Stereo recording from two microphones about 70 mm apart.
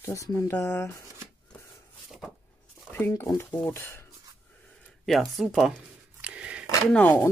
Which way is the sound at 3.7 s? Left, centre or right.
Left.